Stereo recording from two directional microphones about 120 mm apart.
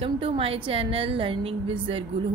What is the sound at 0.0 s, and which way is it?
A woman's voice, 50° right (ahead or behind).